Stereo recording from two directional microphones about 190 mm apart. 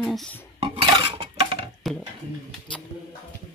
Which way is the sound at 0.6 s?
25° right (ahead or behind).